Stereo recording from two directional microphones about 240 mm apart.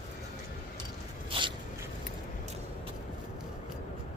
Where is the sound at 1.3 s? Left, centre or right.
Right.